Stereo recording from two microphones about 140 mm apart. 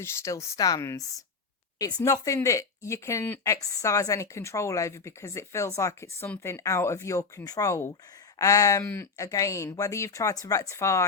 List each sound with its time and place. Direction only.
0.0 s speech: 20° left (ahead or behind)